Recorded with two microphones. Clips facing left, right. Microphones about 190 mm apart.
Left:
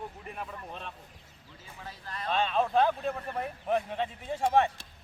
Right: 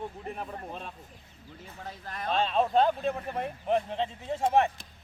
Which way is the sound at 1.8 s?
55° right (ahead or behind).